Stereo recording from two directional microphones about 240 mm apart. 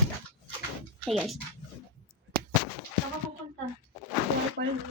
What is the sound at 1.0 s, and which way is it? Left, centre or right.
Speech, centre.